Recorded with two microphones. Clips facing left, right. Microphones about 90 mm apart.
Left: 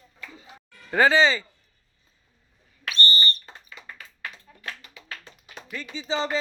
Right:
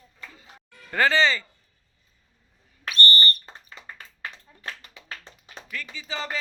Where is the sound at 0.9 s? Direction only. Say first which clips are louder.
Left 2 dB; 15° left (ahead or behind).